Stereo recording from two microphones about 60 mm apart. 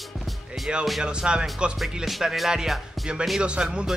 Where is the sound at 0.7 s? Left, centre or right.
Centre.